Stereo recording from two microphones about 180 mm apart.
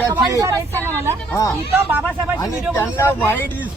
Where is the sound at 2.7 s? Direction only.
15° left (ahead or behind).